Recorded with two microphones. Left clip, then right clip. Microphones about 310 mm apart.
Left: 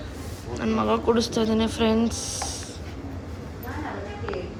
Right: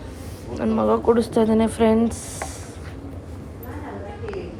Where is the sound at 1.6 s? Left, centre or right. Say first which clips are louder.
Right 5 dB; right.